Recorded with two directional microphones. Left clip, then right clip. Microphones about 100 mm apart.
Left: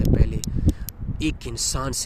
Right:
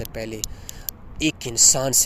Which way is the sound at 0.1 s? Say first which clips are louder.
Left 4 dB; 65° left (ahead or behind).